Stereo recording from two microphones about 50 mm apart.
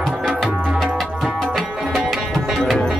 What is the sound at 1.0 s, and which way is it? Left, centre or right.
Music, centre.